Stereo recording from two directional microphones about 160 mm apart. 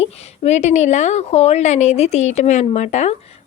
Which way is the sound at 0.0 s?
45° left (ahead or behind).